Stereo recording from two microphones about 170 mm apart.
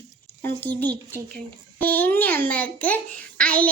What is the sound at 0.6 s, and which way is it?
A child's voice, 10° left (ahead or behind).